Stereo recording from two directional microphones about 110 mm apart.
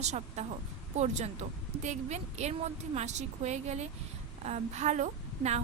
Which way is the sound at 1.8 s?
90° right.